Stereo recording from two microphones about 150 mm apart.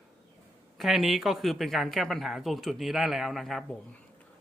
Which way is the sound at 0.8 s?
Centre (ahead or behind).